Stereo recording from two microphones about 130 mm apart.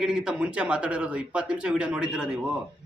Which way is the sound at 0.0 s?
5° right (ahead or behind).